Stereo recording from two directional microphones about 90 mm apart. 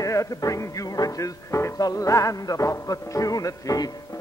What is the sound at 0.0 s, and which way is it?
Music, 40° left (ahead or behind).